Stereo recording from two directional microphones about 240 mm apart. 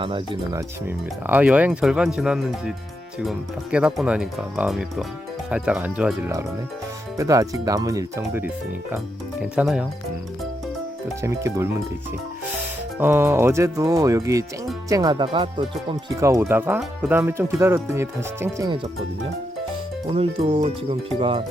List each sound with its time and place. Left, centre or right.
0.0 s speech: centre
11.2 s speech: centre
13.0 s speech: centre
20.1 s speech: right